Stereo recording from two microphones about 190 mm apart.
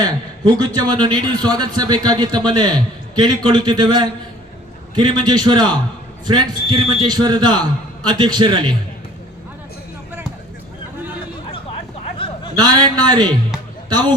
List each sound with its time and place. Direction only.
0.6 s speech: 20° right (ahead or behind)
12.1 s a sound: 25° left (ahead or behind)
12.5 s speech: 20° right (ahead or behind)